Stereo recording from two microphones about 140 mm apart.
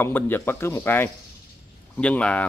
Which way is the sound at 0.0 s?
15° left (ahead or behind).